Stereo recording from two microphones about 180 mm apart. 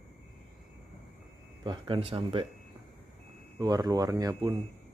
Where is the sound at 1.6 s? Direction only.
25° right (ahead or behind).